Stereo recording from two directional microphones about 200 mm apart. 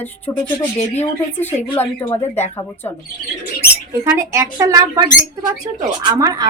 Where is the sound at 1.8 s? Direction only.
10° left (ahead or behind).